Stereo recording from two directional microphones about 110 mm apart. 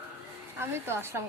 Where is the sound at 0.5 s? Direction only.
25° right (ahead or behind).